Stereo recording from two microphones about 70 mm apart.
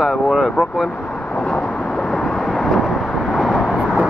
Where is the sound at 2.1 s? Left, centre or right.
Centre.